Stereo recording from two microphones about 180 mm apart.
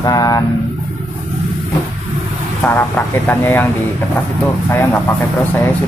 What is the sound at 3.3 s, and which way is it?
Speech, 10° left (ahead or behind).